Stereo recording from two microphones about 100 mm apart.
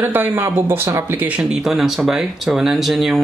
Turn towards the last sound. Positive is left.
turn(degrees=0)  # may be behind; listen again after turning